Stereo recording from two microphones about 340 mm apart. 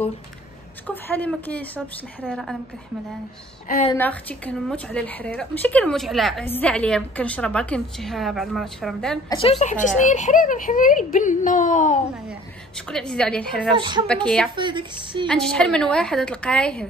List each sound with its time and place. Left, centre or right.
0.8 s a woman's voice: centre
3.6 s a woman's voice: left
3.9 s a woman's voice: centre
9.4 s a woman's voice: centre
12.3 s a woman's voice: centre
13.7 s a woman's voice: centre
14.0 s a woman's voice: centre
14.5 s a woman's voice: centre
15.2 s a woman's voice: centre